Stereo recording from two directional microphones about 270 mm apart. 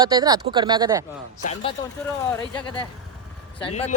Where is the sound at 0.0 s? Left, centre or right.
Centre.